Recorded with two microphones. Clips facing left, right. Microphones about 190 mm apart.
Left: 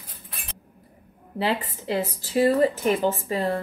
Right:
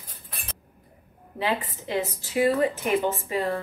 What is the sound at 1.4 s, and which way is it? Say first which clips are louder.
A woman's voice: left 2 dB; 30° left (ahead or behind).